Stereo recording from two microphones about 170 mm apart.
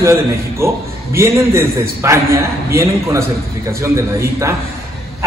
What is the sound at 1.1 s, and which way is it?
A man's voice, 15° right (ahead or behind).